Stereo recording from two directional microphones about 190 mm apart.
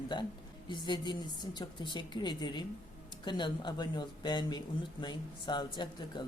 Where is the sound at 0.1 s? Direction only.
25° left (ahead or behind).